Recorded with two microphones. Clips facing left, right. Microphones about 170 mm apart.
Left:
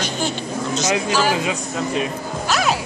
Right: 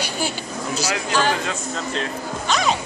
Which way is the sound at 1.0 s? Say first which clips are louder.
Left 2 dB; 10° left (ahead or behind).